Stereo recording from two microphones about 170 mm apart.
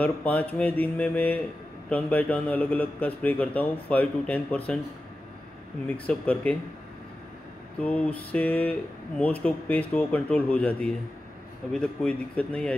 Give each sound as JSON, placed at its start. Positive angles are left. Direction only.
{"t": 0.0, "sound": "speech", "side_deg": 10}
{"t": 5.9, "sound": "speech", "side_deg": 10}
{"t": 7.8, "sound": "speech", "side_deg": 10}